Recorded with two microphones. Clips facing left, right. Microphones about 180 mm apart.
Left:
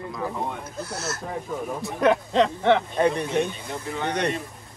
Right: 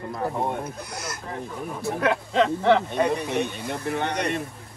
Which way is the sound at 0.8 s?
15° right (ahead or behind).